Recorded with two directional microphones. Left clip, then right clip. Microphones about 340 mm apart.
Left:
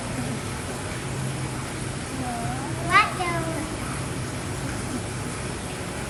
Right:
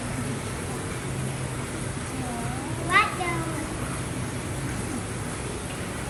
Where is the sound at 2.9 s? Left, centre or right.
Centre.